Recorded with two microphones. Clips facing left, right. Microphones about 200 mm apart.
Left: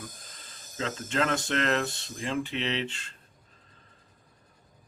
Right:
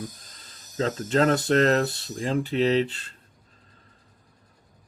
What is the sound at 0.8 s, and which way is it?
Speech, 35° right (ahead or behind).